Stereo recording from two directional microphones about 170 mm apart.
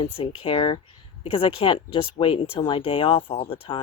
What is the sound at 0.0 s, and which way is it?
Speech, 35° left (ahead or behind).